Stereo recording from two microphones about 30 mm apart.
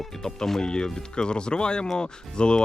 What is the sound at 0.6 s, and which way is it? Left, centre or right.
Speech, left.